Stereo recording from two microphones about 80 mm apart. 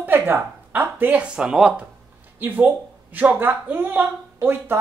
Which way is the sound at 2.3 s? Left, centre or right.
Right.